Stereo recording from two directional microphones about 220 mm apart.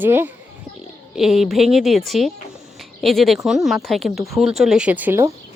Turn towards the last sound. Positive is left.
turn(degrees=-10)  # may be behind; listen again after turning